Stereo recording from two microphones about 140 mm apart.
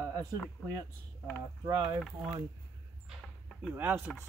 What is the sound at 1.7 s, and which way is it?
Speech, 30° right (ahead or behind).